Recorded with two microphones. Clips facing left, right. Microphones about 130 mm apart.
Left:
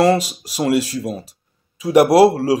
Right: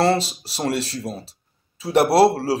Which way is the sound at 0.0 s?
15° left (ahead or behind).